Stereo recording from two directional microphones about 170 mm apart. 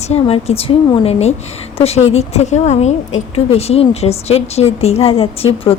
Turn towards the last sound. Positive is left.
turn(degrees=35)  # may be behind; listen again after turning